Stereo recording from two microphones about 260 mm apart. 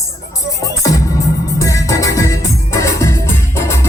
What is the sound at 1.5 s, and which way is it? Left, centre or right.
Music, centre.